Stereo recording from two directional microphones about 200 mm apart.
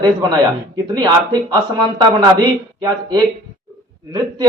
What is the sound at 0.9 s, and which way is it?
Speech, 20° right (ahead or behind).